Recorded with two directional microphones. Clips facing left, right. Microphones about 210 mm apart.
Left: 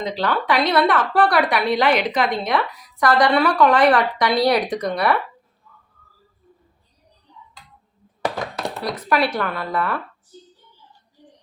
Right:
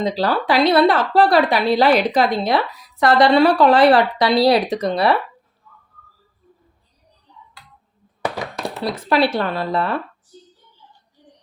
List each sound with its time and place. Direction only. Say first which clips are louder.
0.0 s a woman's voice: right 3 dB; 35° right (ahead or behind)
8.8 s a woman's voice: right 3 dB; 25° right (ahead or behind)